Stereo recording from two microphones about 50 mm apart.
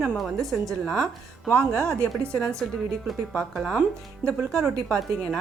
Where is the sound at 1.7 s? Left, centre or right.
Right.